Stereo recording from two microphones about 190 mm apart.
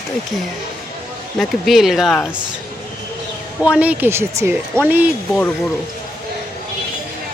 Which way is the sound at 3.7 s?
5° right (ahead or behind).